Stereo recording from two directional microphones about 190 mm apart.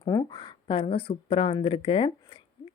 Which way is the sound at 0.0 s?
25° left (ahead or behind).